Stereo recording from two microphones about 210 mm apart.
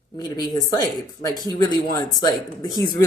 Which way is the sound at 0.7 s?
15° left (ahead or behind).